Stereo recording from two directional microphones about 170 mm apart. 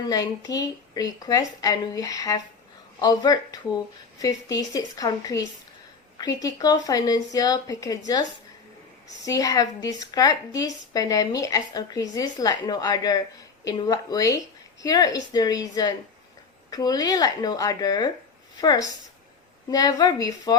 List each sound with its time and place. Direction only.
0.1 s a woman's voice: 20° left (ahead or behind)
9.2 s a woman's voice: 20° left (ahead or behind)